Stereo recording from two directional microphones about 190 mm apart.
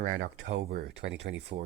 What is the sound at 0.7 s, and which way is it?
Speech, 60° right (ahead or behind).